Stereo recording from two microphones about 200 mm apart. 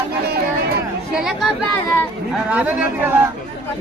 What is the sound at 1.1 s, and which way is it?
Chatter, centre (ahead or behind).